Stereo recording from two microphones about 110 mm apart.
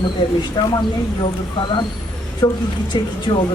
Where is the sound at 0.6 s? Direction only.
40° left (ahead or behind).